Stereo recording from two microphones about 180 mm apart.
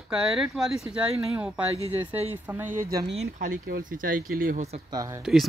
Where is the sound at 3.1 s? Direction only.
35° right (ahead or behind).